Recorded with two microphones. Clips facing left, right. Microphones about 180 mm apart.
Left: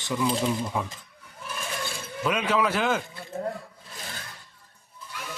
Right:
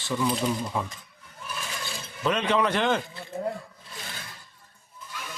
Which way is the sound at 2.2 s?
5° left (ahead or behind).